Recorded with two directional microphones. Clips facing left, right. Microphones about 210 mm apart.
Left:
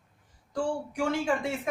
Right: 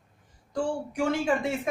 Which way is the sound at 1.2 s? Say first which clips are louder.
Right 2 dB; 20° right (ahead or behind).